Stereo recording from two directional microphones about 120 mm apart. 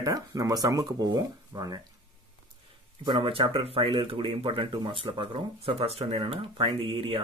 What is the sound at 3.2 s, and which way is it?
Speech, 50° right (ahead or behind).